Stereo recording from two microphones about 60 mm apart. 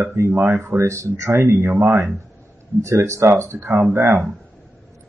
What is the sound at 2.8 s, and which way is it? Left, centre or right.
Speech, right.